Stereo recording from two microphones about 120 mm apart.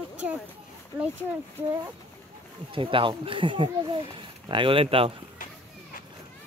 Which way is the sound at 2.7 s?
45° right (ahead or behind).